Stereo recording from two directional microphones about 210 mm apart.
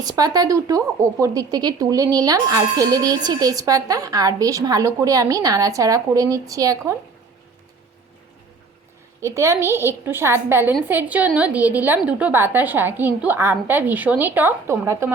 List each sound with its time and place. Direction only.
0.0 s speech: 15° right (ahead or behind)
9.2 s speech: 15° right (ahead or behind)